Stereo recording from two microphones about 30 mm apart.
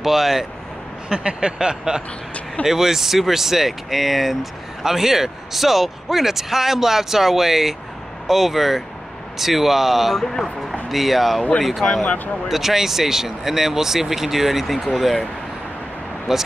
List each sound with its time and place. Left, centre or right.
0.0 s speech: centre
1.1 s a sound: right
2.6 s speech: centre
12.4 s speech: centre
16.3 s speech: centre